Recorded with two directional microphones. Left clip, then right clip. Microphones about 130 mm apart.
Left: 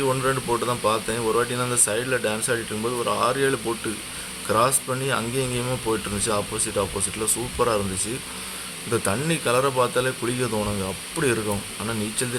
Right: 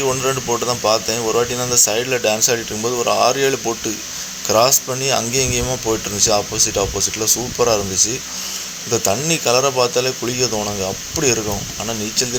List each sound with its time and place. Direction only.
0.3 s speech: 20° right (ahead or behind)
8.9 s speech: 20° right (ahead or behind)